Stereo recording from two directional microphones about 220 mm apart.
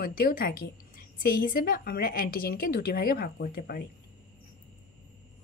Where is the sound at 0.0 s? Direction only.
40° left (ahead or behind).